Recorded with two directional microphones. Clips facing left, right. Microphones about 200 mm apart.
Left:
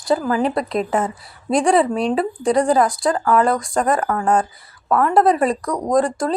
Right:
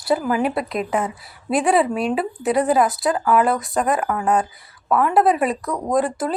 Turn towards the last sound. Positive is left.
turn(degrees=-5)  # may be behind; listen again after turning